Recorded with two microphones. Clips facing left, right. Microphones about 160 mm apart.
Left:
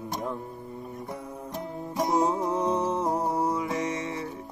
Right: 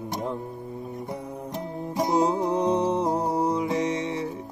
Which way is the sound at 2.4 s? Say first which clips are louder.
Right 3 dB; 15° right (ahead or behind).